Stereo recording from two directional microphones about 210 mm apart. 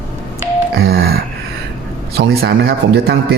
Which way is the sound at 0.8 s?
50° right (ahead or behind).